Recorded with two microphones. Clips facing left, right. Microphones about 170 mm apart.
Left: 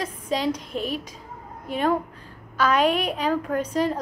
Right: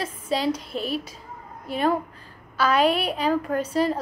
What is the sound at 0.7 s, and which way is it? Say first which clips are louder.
Speech: even; 35° right (ahead or behind).